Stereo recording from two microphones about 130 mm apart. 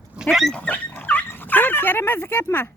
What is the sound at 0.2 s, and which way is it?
Speech, centre (ahead or behind).